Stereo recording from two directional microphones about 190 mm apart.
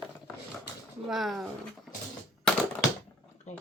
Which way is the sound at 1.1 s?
Centre (ahead or behind).